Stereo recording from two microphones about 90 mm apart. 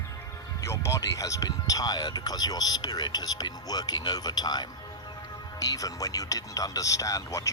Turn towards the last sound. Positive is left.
turn(degrees=35)  # may be behind; listen again after turning